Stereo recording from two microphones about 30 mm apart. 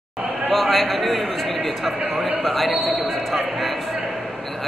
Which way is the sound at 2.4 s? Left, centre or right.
Centre.